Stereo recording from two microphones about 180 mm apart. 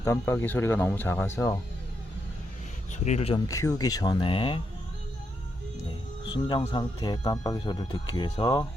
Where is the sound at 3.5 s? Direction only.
20° left (ahead or behind).